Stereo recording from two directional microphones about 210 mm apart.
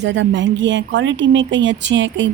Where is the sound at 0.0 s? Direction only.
60° right (ahead or behind).